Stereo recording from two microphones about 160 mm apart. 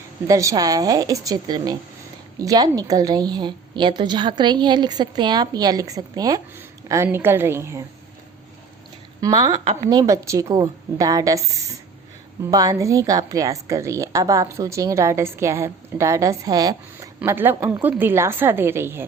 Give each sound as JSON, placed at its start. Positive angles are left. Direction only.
{"t": 0.3, "sound": "a woman's voice", "side_deg": -20}
{"t": 9.2, "sound": "a woman's voice", "side_deg": -25}
{"t": 17.2, "sound": "a woman's voice", "side_deg": -10}